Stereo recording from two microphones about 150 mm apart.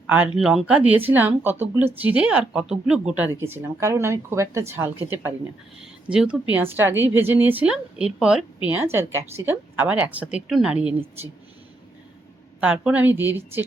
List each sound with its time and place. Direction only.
0.1 s a woman's voice: 5° right (ahead or behind)
12.5 s a woman's voice: 5° right (ahead or behind)